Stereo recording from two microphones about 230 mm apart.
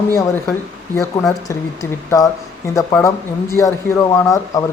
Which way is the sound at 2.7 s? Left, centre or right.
Centre.